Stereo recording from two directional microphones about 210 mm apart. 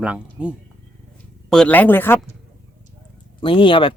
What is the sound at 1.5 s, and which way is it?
Speech, 5° left (ahead or behind).